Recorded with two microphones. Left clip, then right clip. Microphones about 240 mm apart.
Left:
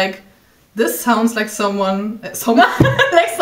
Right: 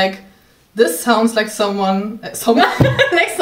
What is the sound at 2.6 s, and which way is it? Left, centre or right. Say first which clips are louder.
Speech: left 3 dB; centre.